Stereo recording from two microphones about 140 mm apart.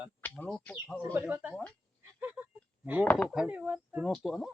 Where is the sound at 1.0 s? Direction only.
15° right (ahead or behind).